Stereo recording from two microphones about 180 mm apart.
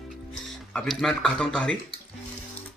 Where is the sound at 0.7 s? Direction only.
5° left (ahead or behind).